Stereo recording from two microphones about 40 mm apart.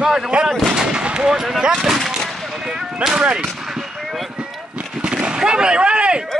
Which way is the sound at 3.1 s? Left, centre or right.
Right.